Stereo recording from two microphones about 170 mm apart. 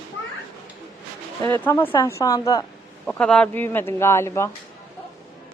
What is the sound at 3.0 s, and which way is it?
Speech, 5° left (ahead or behind).